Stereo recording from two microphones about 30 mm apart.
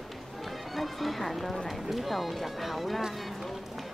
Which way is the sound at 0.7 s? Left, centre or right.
Centre.